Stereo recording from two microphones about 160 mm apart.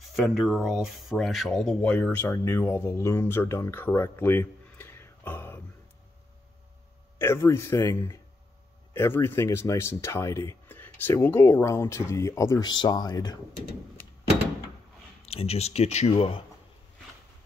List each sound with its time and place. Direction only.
0.0 s speech: centre (ahead or behind)
7.2 s speech: 15° left (ahead or behind)
15.2 s speech: 40° left (ahead or behind)